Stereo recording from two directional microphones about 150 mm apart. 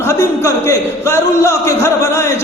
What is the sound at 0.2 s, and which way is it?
Speech, 20° left (ahead or behind).